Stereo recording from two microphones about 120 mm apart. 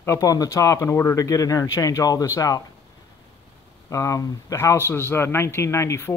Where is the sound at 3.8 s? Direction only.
25° left (ahead or behind).